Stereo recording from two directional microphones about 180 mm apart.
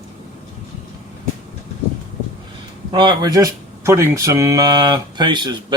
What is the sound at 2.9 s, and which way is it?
Speech, 25° right (ahead or behind).